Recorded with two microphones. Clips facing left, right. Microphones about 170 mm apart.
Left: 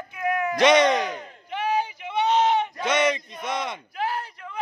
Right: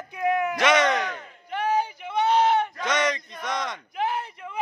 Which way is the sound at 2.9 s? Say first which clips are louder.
Left 4 dB; 25° left (ahead or behind).